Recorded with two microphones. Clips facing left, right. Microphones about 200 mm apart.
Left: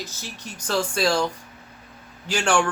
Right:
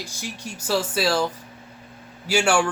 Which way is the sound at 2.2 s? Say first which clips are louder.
Right 2 dB; 10° right (ahead or behind).